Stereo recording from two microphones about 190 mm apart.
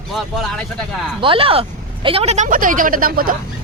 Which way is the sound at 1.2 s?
30° right (ahead or behind).